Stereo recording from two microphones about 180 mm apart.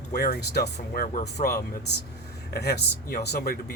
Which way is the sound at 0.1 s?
55° left (ahead or behind).